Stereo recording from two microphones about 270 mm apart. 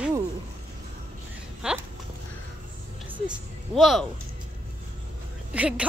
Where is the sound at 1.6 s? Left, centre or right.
Centre.